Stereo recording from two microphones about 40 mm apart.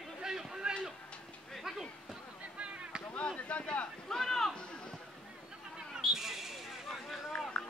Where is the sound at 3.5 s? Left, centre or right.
Left.